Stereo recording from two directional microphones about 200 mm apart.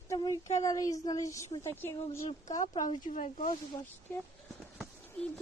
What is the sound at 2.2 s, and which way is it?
Speech, 35° left (ahead or behind).